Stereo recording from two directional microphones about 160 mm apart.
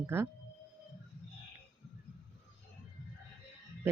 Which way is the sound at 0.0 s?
15° right (ahead or behind).